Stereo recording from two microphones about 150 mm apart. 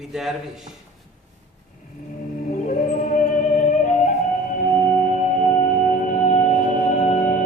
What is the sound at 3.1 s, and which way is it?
Music, 55° left (ahead or behind).